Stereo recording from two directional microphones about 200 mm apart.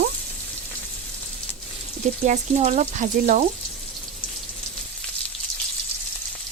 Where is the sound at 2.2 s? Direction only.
35° right (ahead or behind).